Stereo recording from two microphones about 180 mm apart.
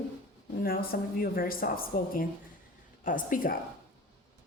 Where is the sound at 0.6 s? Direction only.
55° left (ahead or behind).